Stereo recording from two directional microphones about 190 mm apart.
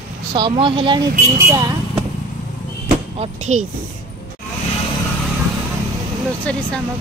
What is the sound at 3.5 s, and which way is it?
Speech, 35° right (ahead or behind).